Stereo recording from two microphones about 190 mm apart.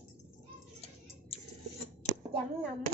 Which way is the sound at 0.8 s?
35° left (ahead or behind).